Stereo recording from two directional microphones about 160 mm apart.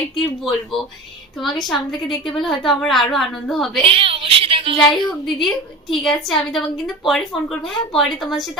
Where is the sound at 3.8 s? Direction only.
35° right (ahead or behind).